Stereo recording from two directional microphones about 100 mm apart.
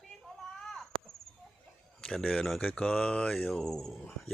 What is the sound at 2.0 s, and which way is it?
Speech, 5° left (ahead or behind).